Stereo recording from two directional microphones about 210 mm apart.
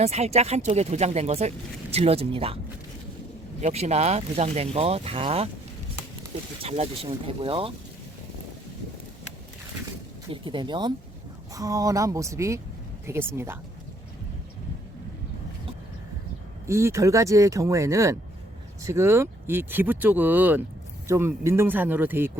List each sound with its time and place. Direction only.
0.0 s speech: 30° right (ahead or behind)
3.6 s speech: 30° right (ahead or behind)
6.6 s speech: 30° right (ahead or behind)
10.4 s speech: 20° right (ahead or behind)
16.6 s speech: 15° right (ahead or behind)